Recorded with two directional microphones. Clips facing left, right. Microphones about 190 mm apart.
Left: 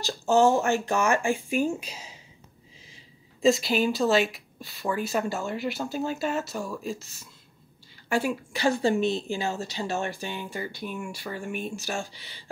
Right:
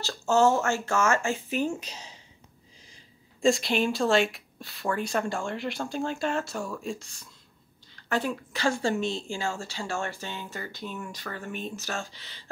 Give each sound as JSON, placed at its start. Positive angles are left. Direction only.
{"t": 0.0, "sound": "a woman's voice", "side_deg": 15}
{"t": 3.4, "sound": "a woman's voice", "side_deg": 0}